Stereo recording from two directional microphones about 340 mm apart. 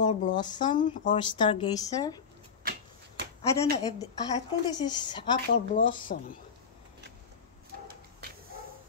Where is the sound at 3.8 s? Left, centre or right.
Centre.